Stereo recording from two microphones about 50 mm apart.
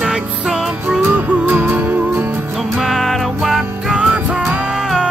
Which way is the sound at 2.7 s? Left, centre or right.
Centre.